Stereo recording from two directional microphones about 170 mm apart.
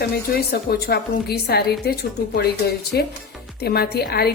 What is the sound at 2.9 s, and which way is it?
A woman's voice, 70° left (ahead or behind).